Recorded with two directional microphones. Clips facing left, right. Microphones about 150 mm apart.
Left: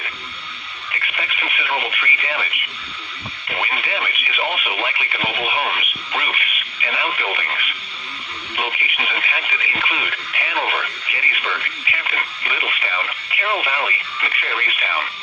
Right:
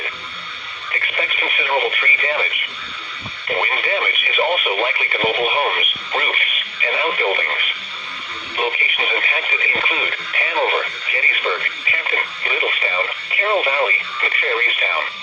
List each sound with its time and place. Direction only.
0.9 s radio: 35° right (ahead or behind)
3.4 s speech: 40° right (ahead or behind)